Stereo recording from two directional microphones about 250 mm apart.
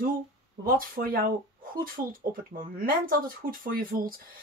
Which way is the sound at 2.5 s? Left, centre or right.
Right.